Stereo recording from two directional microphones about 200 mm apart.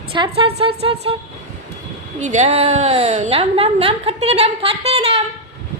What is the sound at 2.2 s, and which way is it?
A woman's voice, 35° right (ahead or behind).